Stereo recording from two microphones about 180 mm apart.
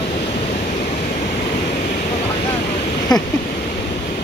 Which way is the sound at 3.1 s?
20° left (ahead or behind).